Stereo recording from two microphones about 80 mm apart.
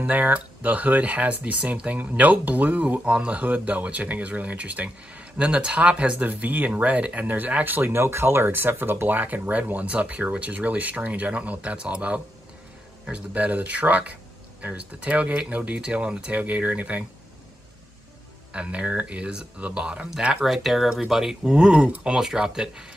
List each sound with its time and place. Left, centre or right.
0.0 s speech: centre
18.5 s speech: centre